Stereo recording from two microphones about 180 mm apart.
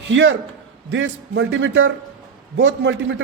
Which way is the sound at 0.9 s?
90° right.